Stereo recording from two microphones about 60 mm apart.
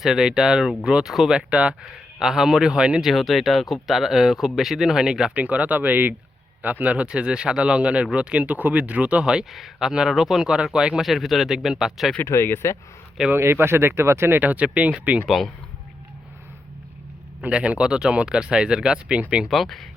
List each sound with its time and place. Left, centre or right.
0.0 s speech: centre
1.4 s speech: centre
2.1 s speech: centre
3.0 s speech: centre
5.3 s speech: right
11.0 s speech: centre
12.2 s speech: left
13.3 s speech: right
15.3 s speech: centre
17.4 s speech: right
19.5 s speech: centre